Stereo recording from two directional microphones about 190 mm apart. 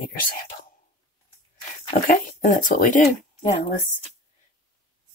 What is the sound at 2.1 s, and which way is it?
Speech, 45° left (ahead or behind).